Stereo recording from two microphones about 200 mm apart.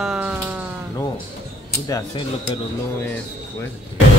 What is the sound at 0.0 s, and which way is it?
Music, 5° right (ahead or behind).